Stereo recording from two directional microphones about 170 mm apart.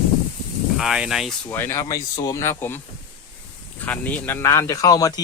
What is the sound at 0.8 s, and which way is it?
Speech, 5° right (ahead or behind).